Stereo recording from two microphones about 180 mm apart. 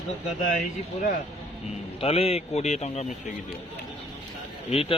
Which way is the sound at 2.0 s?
35° left (ahead or behind).